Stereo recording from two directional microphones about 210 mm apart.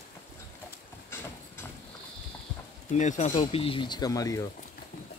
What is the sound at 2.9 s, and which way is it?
Speech, 35° left (ahead or behind).